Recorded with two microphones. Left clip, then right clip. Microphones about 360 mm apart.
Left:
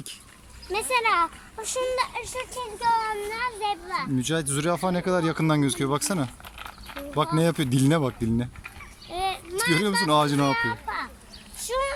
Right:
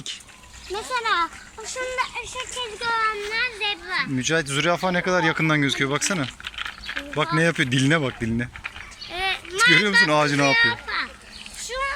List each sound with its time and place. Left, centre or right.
0.7 s speech: centre
3.3 s speech: centre
11.6 s a sound: left